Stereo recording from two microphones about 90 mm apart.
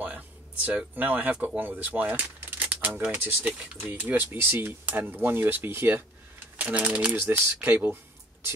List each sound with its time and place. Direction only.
0.7 s speech: 20° right (ahead or behind)